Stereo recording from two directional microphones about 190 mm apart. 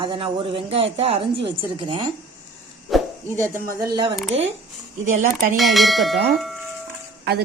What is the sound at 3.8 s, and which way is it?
Speech, 25° right (ahead or behind).